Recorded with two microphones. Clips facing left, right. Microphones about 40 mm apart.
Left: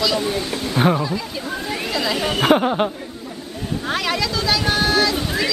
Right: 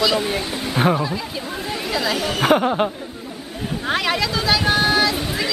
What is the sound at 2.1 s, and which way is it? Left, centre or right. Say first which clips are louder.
Speech: left 1 dB; centre.